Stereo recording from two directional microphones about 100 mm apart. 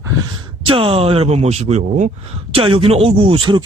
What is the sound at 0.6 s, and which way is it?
Speech, 65° right (ahead or behind).